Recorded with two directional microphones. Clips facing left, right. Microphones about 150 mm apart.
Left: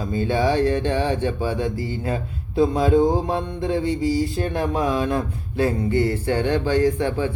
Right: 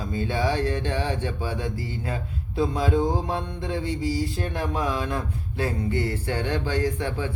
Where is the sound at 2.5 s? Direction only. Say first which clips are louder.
Left 6 dB; 50° left (ahead or behind).